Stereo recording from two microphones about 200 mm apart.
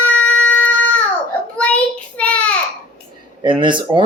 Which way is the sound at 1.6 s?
5° left (ahead or behind).